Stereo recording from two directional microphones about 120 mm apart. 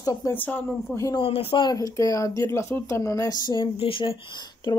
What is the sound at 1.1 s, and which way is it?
Speech, 50° left (ahead or behind).